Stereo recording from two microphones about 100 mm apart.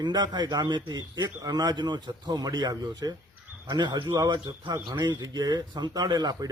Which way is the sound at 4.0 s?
35° right (ahead or behind).